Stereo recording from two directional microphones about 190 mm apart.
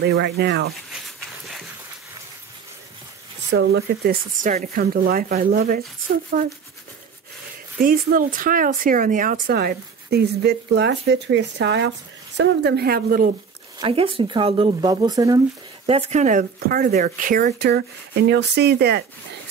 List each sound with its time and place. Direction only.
0.0 s speech: 60° right (ahead or behind)
3.5 s speech: 65° right (ahead or behind); by 6.5 s 45° right (ahead or behind)
7.8 s speech: 50° right (ahead or behind); by 11.9 s 70° right (ahead or behind)
12.4 s speech: 60° right (ahead or behind)
13.7 s speech: 30° right (ahead or behind)
15.9 s speech: 35° right (ahead or behind); by 19.0 s 60° right (ahead or behind)